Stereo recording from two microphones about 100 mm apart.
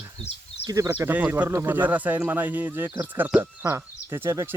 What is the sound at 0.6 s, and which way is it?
Speech, 35° right (ahead or behind).